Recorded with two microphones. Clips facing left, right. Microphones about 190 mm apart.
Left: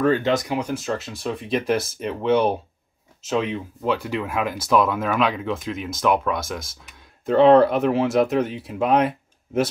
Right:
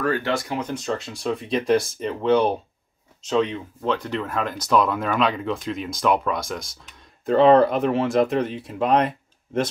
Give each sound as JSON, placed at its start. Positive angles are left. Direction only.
{"t": 0.0, "sound": "speech", "side_deg": 20}